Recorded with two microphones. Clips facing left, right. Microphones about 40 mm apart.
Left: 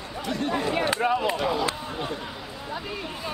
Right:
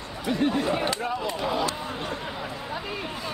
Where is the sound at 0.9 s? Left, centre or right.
Left.